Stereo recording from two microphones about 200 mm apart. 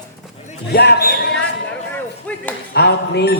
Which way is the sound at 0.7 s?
55° left (ahead or behind).